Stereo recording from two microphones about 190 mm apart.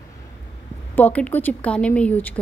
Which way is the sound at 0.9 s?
10° left (ahead or behind).